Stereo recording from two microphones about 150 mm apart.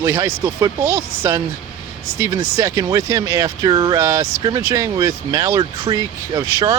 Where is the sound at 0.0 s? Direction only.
20° right (ahead or behind).